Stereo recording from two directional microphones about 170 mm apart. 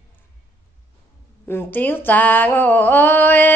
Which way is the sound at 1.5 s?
10° left (ahead or behind).